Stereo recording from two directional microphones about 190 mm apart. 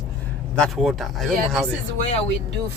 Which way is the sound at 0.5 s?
Centre (ahead or behind).